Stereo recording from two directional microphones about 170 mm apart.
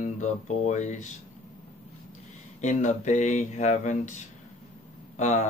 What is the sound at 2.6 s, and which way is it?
Speech, 45° left (ahead or behind).